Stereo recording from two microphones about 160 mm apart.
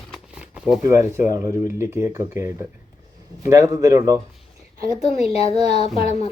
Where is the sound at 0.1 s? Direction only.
5° right (ahead or behind).